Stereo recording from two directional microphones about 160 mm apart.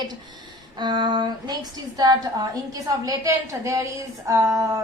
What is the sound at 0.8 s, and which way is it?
Speech, 25° right (ahead or behind).